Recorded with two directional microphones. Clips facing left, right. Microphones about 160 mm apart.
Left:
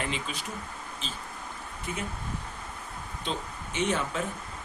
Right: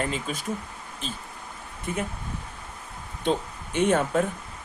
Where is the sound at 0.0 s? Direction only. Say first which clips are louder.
Right 5 dB; 45° right (ahead or behind).